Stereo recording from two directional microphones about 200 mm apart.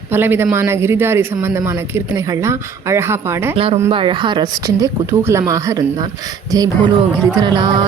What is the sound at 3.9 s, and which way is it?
Speech, 25° right (ahead or behind).